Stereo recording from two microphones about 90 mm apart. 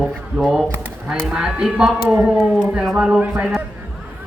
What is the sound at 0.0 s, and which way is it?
Speech, 5° right (ahead or behind).